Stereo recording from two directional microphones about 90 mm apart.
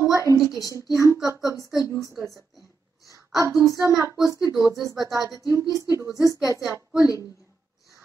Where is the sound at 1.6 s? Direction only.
40° left (ahead or behind).